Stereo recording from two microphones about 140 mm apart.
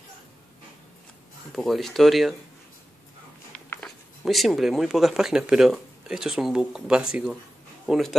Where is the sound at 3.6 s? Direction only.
10° left (ahead or behind).